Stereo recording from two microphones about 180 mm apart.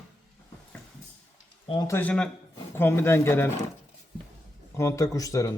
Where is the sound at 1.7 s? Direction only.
25° left (ahead or behind).